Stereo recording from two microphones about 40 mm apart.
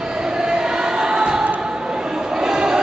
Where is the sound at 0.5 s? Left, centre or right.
Centre.